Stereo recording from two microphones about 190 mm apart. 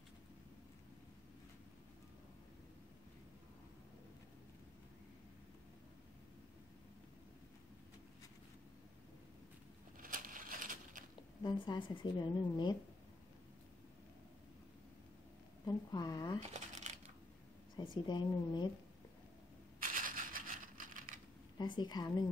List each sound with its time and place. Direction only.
9.9 s crushing: 45° right (ahead or behind)
11.4 s speech: 25° left (ahead or behind)
15.6 s speech: 20° left (ahead or behind)
16.3 s coin: 40° right (ahead or behind)
17.9 s speech: 25° left (ahead or behind)
19.8 s a sound: 45° right (ahead or behind)
21.5 s speech: 25° left (ahead or behind)